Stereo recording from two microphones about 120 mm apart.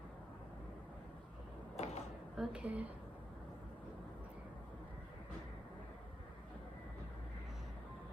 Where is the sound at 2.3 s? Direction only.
5° right (ahead or behind).